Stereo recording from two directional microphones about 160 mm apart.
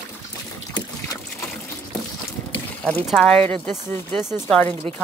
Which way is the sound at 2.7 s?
10° left (ahead or behind).